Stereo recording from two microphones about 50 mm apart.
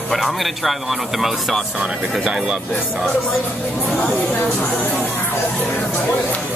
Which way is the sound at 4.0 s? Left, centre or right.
Left.